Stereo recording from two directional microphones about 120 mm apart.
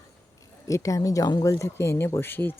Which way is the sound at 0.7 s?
25° left (ahead or behind).